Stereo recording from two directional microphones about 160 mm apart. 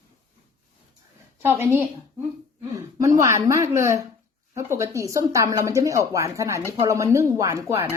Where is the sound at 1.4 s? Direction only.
15° right (ahead or behind).